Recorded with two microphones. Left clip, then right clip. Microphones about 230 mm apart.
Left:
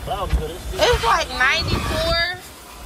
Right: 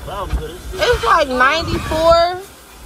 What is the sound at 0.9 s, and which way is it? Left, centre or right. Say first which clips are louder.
Speech: right 5 dB; centre.